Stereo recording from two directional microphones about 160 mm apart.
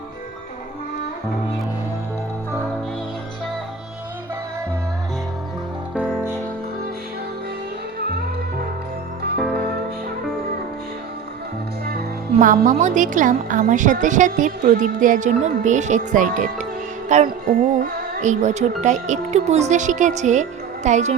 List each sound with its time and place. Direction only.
5.9 s music: 5° right (ahead or behind)
12.4 s a woman's voice: 55° right (ahead or behind)
17.1 s music: 50° right (ahead or behind)
18.8 s a woman's voice: 50° right (ahead or behind)